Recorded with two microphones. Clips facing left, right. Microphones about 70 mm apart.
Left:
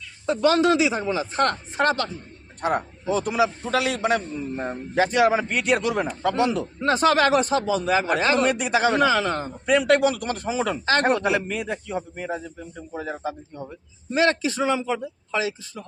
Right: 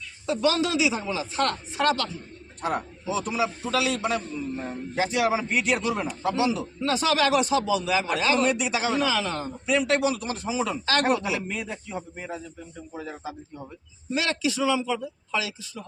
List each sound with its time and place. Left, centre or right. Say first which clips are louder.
0.3 s speech: left 5 dB; left
2.6 s a man's voice: left 4 dB; left
14.1 s speech: left 5 dB; left